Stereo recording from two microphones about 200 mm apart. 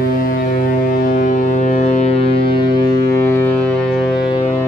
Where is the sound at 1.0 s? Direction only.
40° left (ahead or behind).